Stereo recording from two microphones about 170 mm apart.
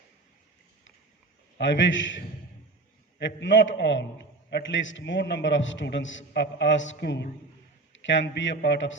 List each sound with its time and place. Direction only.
1.5 s a man's voice: 90° left
3.2 s a man's voice: 90° left